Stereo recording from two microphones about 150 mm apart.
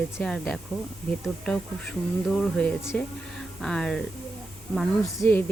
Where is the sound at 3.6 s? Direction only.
5° left (ahead or behind).